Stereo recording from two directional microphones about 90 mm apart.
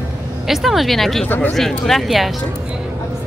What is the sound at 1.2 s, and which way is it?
Speech, 20° left (ahead or behind).